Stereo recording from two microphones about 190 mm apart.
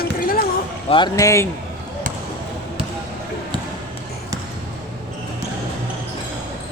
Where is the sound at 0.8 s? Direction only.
25° left (ahead or behind).